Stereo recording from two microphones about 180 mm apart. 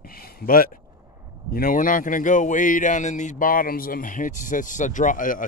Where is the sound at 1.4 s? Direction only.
55° left (ahead or behind).